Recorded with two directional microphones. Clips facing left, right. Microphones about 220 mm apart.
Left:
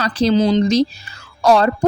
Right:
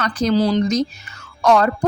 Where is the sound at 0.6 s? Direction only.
30° left (ahead or behind).